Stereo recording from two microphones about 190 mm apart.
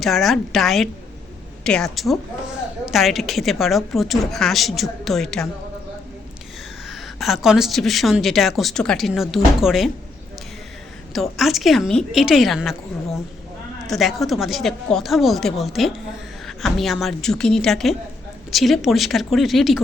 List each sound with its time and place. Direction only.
0.0 s a woman's voice: centre (ahead or behind)
6.8 s a woman's voice: centre (ahead or behind)
11.1 s a woman's voice: centre (ahead or behind)